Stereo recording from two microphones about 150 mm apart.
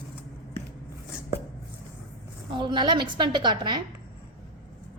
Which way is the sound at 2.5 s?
30° right (ahead or behind).